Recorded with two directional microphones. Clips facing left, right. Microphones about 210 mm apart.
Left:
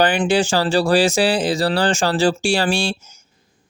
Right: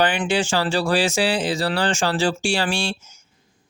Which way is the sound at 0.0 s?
35° left (ahead or behind).